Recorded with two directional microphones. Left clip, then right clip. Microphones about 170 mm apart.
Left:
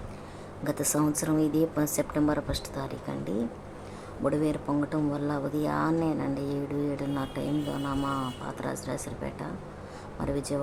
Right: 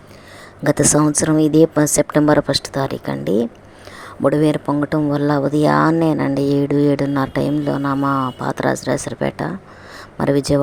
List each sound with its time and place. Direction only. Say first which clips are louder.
0.6 s speech: right 13 dB; 50° right (ahead or behind)